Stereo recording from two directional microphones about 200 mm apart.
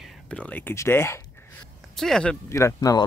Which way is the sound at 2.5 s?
15° left (ahead or behind).